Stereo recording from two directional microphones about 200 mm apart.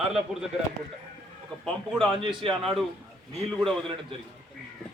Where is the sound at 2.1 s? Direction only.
25° right (ahead or behind).